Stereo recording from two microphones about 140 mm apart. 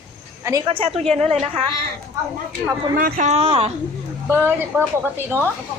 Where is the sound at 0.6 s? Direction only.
40° right (ahead or behind).